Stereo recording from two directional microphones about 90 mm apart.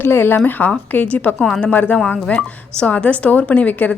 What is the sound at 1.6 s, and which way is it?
Speech, 15° left (ahead or behind).